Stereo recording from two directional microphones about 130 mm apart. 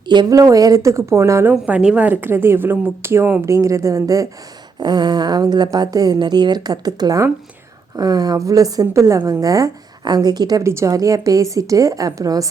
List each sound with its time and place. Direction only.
0.1 s a woman's voice: 30° right (ahead or behind)